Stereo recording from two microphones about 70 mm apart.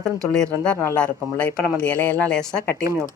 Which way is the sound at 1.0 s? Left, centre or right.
Centre.